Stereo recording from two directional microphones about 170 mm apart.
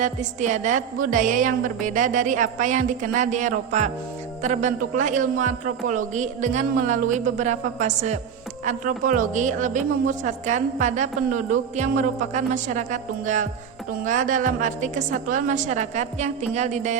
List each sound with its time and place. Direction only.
0.0 s a woman's voice: 45° right (ahead or behind)